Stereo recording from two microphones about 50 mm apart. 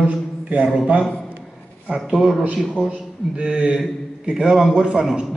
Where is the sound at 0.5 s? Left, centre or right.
Right.